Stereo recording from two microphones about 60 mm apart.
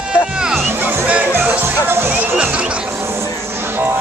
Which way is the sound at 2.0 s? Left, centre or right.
Right.